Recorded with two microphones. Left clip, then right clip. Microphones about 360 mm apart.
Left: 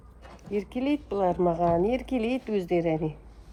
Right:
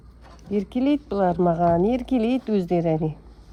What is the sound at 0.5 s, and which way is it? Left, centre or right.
Speech, right.